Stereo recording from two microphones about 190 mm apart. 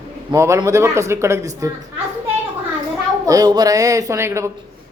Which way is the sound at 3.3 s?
20° right (ahead or behind).